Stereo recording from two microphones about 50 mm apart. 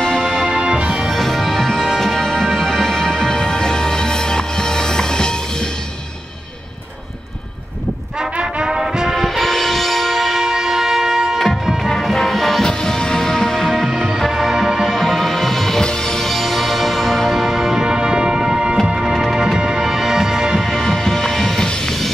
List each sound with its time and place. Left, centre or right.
0.0 s music: centre
8.2 s music: centre
9.1 s music: centre
14.3 s music: centre
19.1 s music: centre
20.5 s music: centre